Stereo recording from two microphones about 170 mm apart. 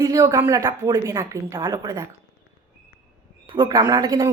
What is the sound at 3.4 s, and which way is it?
Speech, 25° right (ahead or behind).